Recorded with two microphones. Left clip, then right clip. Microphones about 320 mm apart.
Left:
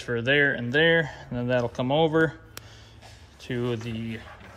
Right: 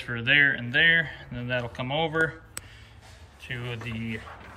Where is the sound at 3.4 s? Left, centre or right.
Centre.